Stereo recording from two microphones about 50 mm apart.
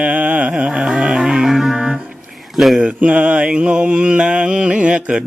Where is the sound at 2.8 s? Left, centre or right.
Right.